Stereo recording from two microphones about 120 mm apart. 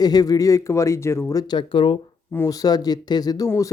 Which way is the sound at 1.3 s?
35° left (ahead or behind).